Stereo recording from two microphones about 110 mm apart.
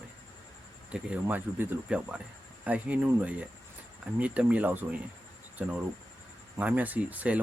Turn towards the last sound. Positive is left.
turn(degrees=-15)  # may be behind; listen again after turning